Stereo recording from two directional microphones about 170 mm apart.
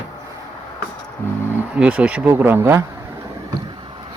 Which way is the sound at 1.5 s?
10° right (ahead or behind).